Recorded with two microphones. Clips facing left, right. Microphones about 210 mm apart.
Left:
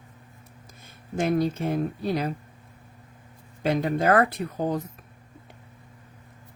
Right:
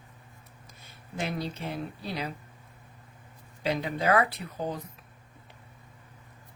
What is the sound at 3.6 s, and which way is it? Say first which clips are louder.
Speech: left 5 dB; 50° left (ahead or behind).